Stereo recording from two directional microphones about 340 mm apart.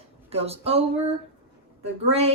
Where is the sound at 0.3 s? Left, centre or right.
Centre.